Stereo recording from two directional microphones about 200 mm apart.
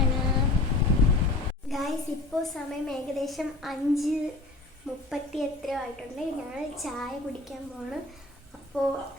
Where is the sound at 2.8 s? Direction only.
Centre (ahead or behind).